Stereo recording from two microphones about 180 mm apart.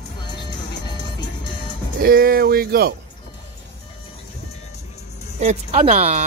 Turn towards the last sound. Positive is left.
turn(degrees=-40)  # may be behind; listen again after turning